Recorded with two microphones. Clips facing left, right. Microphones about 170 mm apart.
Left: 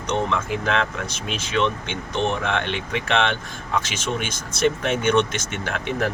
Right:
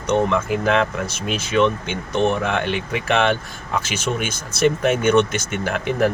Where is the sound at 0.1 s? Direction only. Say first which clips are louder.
Right 5 dB; 5° right (ahead or behind).